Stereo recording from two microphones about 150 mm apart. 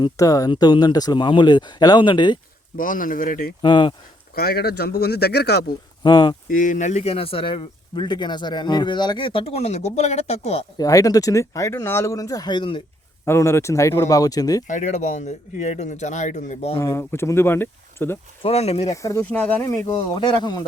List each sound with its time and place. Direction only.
0.0 s speech: 25° left (ahead or behind)
2.7 s speech: 65° left (ahead or behind)
3.6 s speech: 30° left (ahead or behind)
4.4 s speech: 90° left
6.0 s speech: 30° left (ahead or behind)
6.5 s speech: 60° left (ahead or behind); by 10.7 s 40° left (ahead or behind)
10.8 s speech: 25° left (ahead or behind)
13.2 s speech: 20° left (ahead or behind)
14.7 s speech: 55° left (ahead or behind)
16.7 s speech: 20° left (ahead or behind)
18.4 s speech: 40° left (ahead or behind)
19.0 s speech: 15° left (ahead or behind)
20.1 s speech: 30° left (ahead or behind)